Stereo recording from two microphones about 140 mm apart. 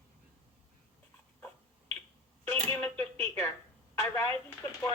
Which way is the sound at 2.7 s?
10° left (ahead or behind).